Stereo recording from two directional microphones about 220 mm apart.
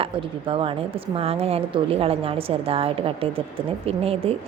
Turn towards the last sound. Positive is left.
turn(degrees=-25)  # may be behind; listen again after turning